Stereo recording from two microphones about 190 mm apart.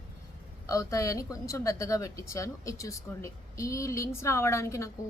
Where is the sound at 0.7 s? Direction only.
15° left (ahead or behind).